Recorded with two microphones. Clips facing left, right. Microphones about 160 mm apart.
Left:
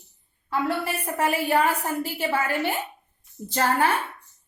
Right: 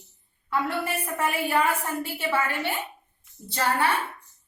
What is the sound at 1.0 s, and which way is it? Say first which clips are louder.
A woman's voice: left 7 dB; 40° left (ahead or behind).